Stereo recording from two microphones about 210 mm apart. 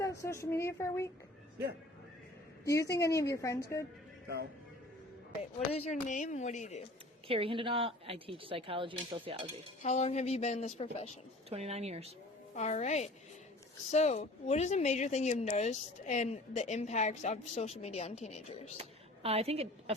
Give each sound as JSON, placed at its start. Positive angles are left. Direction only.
{"t": 0.2, "sound": "a woman's voice", "side_deg": 15}
{"t": 2.6, "sound": "a woman's voice", "side_deg": 15}
{"t": 5.4, "sound": "speech", "side_deg": 30}
{"t": 7.3, "sound": "speech", "side_deg": -25}
{"t": 9.8, "sound": "speech", "side_deg": 35}
{"t": 11.4, "sound": "speech", "side_deg": -30}
{"t": 12.5, "sound": "speech", "side_deg": 35}
{"t": 18.8, "sound": "a woman's voice", "side_deg": -30}